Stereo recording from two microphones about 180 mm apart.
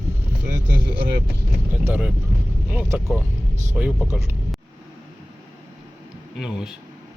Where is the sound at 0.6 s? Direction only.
65° right (ahead or behind).